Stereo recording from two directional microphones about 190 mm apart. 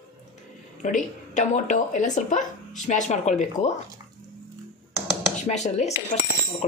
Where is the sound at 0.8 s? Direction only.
40° left (ahead or behind).